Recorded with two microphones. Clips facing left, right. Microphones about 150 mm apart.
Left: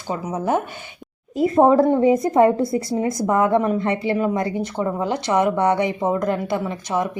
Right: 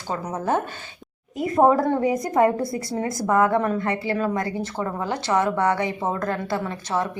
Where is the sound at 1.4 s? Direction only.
25° left (ahead or behind).